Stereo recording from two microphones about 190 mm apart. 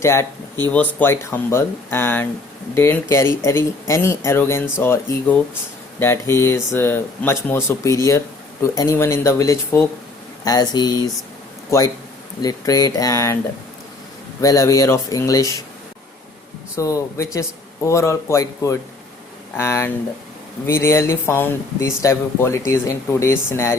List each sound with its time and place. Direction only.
0.0 s speech: 15° left (ahead or behind)
12.4 s speech: 20° left (ahead or behind)
14.4 s speech: 15° left (ahead or behind)
16.7 s speech: 15° left (ahead or behind)